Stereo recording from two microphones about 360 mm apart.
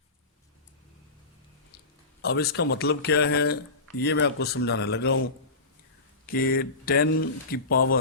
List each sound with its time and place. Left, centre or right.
2.2 s speech: left
6.2 s speech: left